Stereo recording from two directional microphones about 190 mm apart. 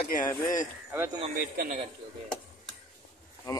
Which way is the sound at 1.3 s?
50° right (ahead or behind).